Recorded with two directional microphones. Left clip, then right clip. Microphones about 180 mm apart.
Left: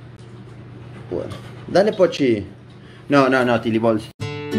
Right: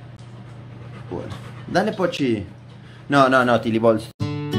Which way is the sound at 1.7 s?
20° right (ahead or behind).